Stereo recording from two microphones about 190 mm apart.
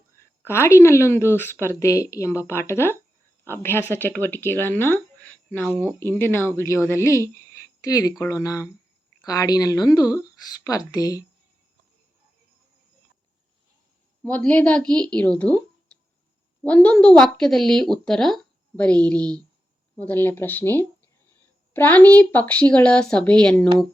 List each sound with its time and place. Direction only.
0.2 s a woman's voice: 15° left (ahead or behind)
14.3 s a woman's voice: 10° left (ahead or behind)